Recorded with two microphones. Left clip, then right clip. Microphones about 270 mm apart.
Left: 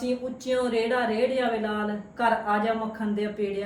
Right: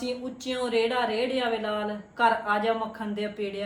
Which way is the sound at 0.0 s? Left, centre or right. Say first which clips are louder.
Left 3 dB; centre.